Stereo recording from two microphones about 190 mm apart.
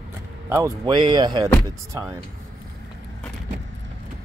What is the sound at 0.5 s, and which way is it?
Speech, 20° right (ahead or behind).